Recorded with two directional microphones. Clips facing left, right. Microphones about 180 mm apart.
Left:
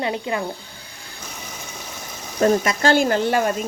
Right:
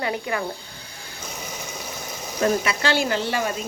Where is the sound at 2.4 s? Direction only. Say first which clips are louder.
Left 4 dB; 45° left (ahead or behind).